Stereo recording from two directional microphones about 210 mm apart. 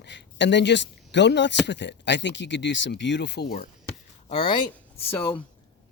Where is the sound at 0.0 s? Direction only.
55° left (ahead or behind).